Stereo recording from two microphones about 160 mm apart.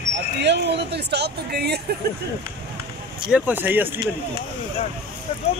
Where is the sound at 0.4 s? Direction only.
90° right.